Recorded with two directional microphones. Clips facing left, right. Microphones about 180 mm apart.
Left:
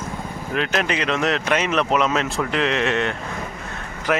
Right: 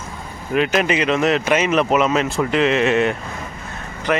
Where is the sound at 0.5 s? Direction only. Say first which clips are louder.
Right 5 dB; 5° right (ahead or behind).